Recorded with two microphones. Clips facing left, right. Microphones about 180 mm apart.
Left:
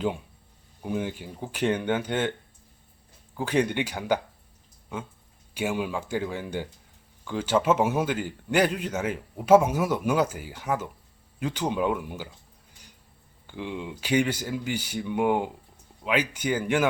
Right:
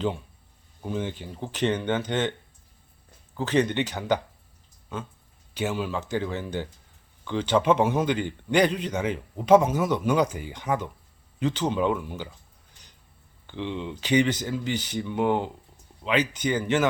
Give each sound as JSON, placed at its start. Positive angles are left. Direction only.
{"t": 0.8, "sound": "speech", "side_deg": 10}
{"t": 3.3, "sound": "speech", "side_deg": 10}
{"t": 5.5, "sound": "speech", "side_deg": 10}
{"t": 13.5, "sound": "speech", "side_deg": 10}